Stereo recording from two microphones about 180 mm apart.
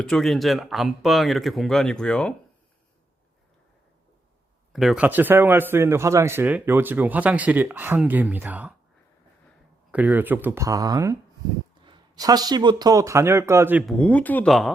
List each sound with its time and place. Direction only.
0.0 s speech: 5° left (ahead or behind)
4.7 s speech: centre (ahead or behind)
9.9 s speech: 10° right (ahead or behind)
13.8 s speech: 5° left (ahead or behind)